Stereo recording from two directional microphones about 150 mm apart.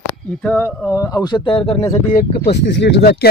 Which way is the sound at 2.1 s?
90° left.